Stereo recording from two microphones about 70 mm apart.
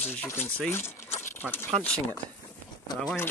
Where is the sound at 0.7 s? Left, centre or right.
Left.